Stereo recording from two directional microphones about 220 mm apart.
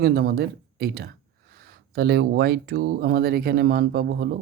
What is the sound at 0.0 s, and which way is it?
Speech, 45° right (ahead or behind).